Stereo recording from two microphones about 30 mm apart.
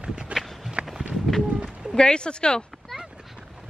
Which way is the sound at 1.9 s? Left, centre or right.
Left.